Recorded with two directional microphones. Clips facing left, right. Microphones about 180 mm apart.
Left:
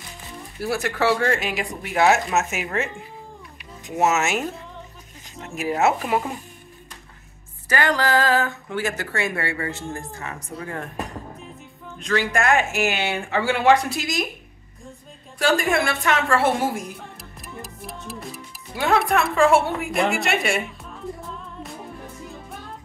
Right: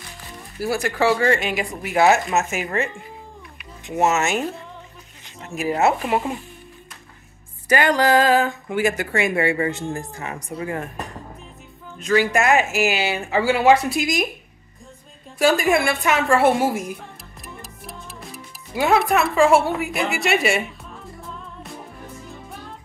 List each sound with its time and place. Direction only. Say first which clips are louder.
0.6 s speech: right 2 dB; centre (ahead or behind)
3.9 s speech: right 1 dB; 5° left (ahead or behind)
7.6 s speech: right 4 dB; 15° right (ahead or behind)
12.0 s speech: right 4 dB; 5° right (ahead or behind)
15.3 s speech: right 3 dB; 10° right (ahead or behind)
17.6 s music: left 5 dB; centre (ahead or behind)
18.9 s speech: right 1 dB; 5° right (ahead or behind)